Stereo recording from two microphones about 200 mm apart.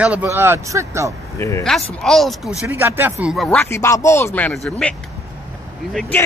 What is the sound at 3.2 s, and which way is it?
Speech, centre (ahead or behind).